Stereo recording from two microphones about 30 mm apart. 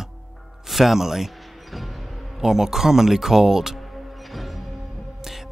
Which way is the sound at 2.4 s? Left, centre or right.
Centre.